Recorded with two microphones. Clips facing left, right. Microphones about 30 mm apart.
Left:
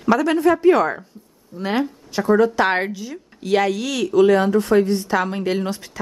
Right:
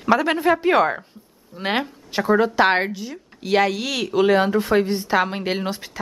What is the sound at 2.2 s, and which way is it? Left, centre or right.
A woman's voice, right.